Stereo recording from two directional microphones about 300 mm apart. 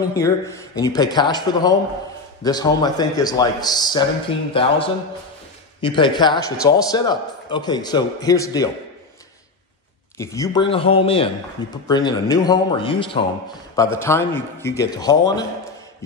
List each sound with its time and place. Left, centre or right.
0.1 s a man's voice: centre
5.8 s a man's voice: centre
10.1 s a man's voice: centre